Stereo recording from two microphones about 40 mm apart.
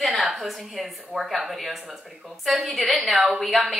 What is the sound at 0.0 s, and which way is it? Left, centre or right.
A woman's voice, centre.